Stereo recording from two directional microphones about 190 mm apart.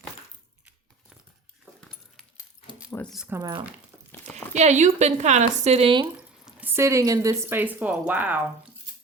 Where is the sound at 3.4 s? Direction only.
20° right (ahead or behind).